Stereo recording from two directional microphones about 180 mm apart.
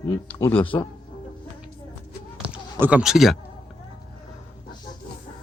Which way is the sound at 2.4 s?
5° right (ahead or behind).